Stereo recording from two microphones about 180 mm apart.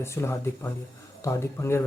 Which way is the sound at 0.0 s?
15° left (ahead or behind).